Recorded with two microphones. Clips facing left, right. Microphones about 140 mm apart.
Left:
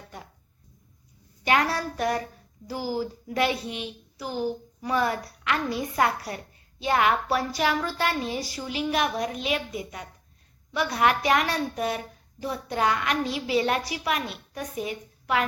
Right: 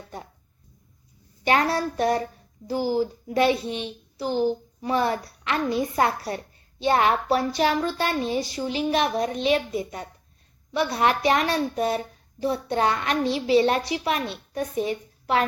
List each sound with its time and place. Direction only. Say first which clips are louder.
1.5 s a woman's voice: right 2 dB; 30° right (ahead or behind)